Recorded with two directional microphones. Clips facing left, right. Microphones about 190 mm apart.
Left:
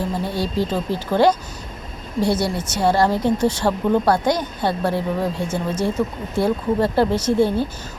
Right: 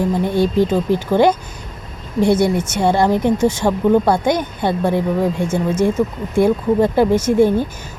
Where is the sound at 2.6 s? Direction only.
20° right (ahead or behind).